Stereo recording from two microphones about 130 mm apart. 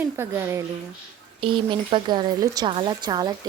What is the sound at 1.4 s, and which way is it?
Speech, 40° right (ahead or behind).